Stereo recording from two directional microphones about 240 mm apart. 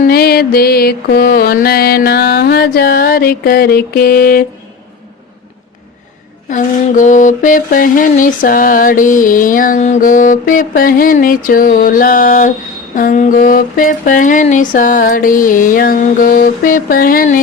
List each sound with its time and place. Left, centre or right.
0.0 s mantra: left
6.5 s mantra: left